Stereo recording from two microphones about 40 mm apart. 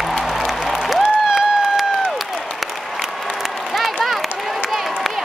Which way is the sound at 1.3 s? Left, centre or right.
Centre.